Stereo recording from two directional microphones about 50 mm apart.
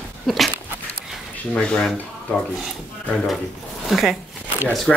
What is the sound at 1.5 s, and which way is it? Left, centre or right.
Speech, centre.